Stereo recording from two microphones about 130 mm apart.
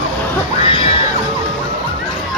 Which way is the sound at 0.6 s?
45° left (ahead or behind).